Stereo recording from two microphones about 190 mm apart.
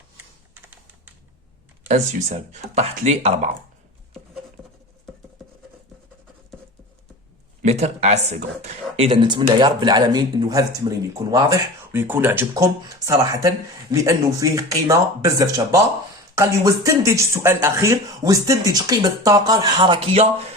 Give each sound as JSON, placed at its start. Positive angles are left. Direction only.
{"t": 1.9, "sound": "speech", "side_deg": -35}
{"t": 7.6, "sound": "speech", "side_deg": -35}